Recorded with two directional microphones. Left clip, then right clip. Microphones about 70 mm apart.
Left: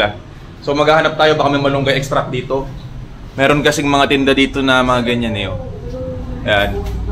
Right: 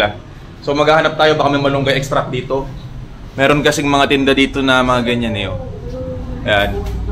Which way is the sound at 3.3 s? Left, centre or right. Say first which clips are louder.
Even; left.